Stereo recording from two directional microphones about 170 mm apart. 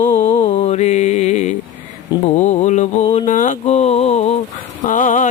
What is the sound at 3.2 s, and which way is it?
Mantra, 45° left (ahead or behind).